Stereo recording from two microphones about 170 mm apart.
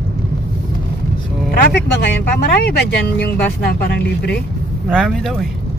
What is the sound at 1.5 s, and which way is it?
Speech, 65° left (ahead or behind).